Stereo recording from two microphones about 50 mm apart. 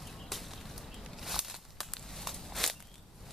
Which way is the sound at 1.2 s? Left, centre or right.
Centre.